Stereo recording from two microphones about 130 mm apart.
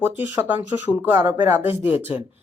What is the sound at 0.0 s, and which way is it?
Speech, 15° right (ahead or behind).